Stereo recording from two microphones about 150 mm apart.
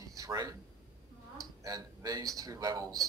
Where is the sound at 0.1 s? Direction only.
25° right (ahead or behind).